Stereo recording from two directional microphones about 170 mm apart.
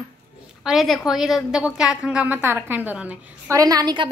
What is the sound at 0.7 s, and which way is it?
A woman's voice, centre (ahead or behind).